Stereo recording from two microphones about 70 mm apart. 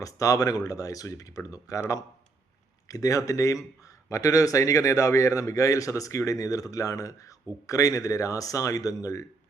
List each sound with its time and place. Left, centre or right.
0.0 s a man's voice: left